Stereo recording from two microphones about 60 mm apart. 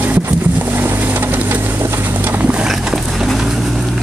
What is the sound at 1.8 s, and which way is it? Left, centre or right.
Clip-clop, right.